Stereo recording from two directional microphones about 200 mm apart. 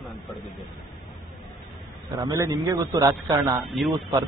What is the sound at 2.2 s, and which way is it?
A man's voice, 15° right (ahead or behind).